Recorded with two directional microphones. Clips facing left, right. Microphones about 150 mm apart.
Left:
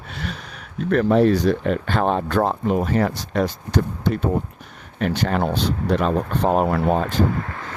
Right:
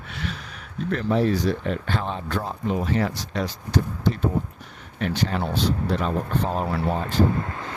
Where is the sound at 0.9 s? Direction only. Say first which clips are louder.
Left 6 dB; 60° left (ahead or behind).